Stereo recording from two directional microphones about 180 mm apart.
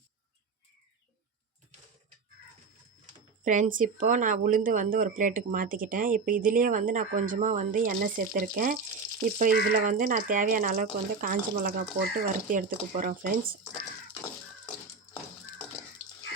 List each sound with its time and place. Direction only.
3.4 s speech: 45° right (ahead or behind)
9.8 s speech: 45° right (ahead or behind)